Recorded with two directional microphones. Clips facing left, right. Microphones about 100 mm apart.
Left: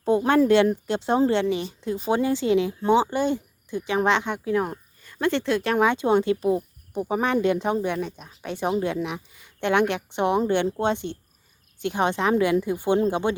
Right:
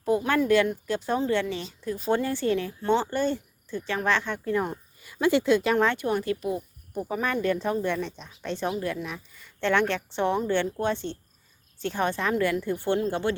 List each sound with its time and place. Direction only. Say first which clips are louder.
0.0 s speech: left 5 dB; 25° left (ahead or behind)
4.4 s speech: left 3 dB; 5° left (ahead or behind)
5.7 s speech: left 4 dB; 15° left (ahead or behind)